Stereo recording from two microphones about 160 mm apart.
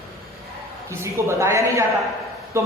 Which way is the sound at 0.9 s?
15° right (ahead or behind).